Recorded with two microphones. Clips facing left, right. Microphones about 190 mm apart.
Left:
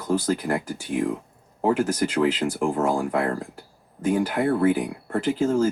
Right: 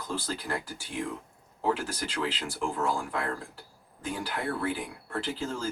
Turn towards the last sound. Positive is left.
turn(degrees=45)  # may be behind; listen again after turning